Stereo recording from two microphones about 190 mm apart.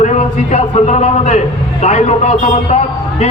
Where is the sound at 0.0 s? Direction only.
35° left (ahead or behind).